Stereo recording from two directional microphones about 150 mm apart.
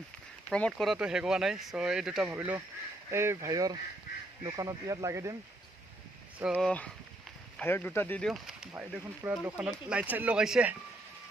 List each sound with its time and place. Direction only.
0.5 s speech: 5° left (ahead or behind); by 5.4 s 20° right (ahead or behind)
6.6 s speech: 10° left (ahead or behind)
8.3 s speech: centre (ahead or behind)